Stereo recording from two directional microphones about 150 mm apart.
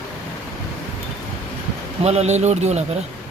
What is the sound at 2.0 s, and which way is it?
Speech, 45° right (ahead or behind).